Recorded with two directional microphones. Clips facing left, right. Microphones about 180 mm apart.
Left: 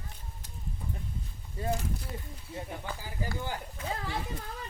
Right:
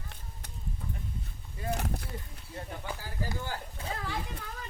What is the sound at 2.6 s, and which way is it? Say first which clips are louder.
Speech: left 1 dB; 15° left (ahead or behind).